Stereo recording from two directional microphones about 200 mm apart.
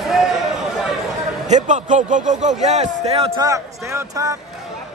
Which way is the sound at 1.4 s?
35° right (ahead or behind).